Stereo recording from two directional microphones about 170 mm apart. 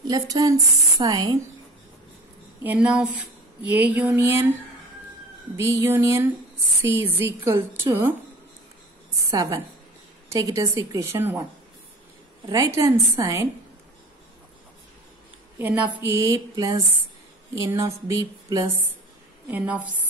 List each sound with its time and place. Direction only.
0.0 s speech: 20° right (ahead or behind)
2.6 s speech: 10° right (ahead or behind)
5.6 s speech: 15° right (ahead or behind)
9.3 s speech: 20° right (ahead or behind)
12.4 s speech: 20° right (ahead or behind)
15.6 s speech: 10° right (ahead or behind)